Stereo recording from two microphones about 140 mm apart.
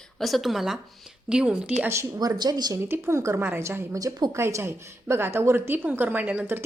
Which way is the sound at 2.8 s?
20° right (ahead or behind).